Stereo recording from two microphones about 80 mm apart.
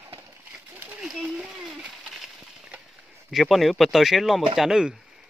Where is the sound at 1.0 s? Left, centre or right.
Centre.